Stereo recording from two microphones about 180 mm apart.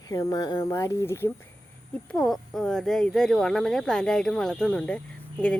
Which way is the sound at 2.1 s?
Centre (ahead or behind).